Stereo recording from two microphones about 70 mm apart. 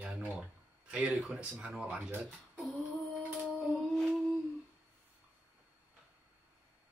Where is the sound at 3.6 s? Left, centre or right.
Centre.